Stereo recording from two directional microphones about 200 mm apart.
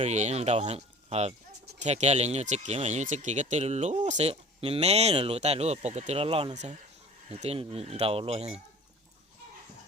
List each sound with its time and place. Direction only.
0.0 s speech: 35° right (ahead or behind)